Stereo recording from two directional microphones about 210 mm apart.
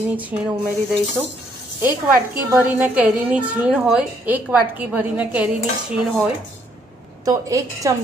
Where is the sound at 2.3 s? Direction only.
5° right (ahead or behind).